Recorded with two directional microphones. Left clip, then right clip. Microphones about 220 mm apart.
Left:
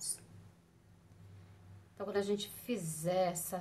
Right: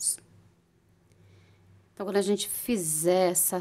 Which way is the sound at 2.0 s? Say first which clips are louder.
Right 9 dB; 50° right (ahead or behind).